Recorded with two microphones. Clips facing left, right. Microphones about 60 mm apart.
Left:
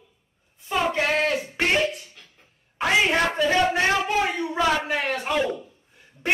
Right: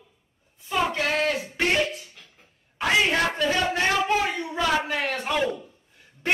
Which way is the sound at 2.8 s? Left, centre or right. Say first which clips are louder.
Left 1 dB; centre.